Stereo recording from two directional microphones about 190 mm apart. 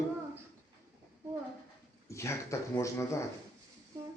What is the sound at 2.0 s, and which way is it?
A man's voice, 15° left (ahead or behind).